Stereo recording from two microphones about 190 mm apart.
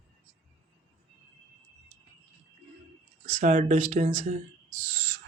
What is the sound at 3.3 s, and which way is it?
A man's voice, 40° right (ahead or behind).